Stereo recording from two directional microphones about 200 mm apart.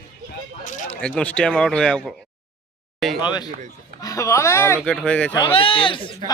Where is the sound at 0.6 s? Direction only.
40° left (ahead or behind).